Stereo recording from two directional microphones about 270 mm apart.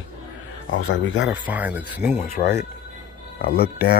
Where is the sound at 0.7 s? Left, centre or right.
Left.